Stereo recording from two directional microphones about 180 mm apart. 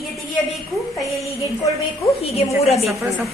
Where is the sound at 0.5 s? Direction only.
Centre (ahead or behind).